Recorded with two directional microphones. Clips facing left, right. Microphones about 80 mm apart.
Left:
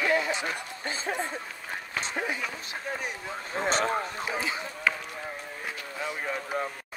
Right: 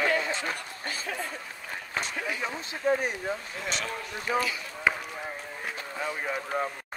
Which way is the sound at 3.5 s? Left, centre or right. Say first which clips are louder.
Left 7 dB; left.